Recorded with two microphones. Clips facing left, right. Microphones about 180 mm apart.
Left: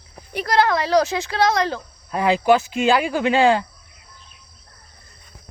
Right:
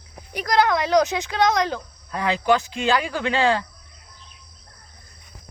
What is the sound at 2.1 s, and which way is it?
Speech, 15° left (ahead or behind).